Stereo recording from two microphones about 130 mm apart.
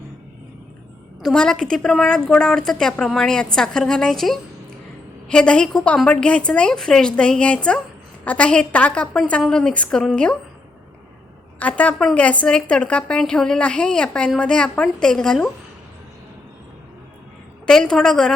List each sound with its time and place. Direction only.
1.2 s a woman's voice: 5° left (ahead or behind)
11.6 s a woman's voice: 10° left (ahead or behind)
17.7 s a woman's voice: 5° left (ahead or behind)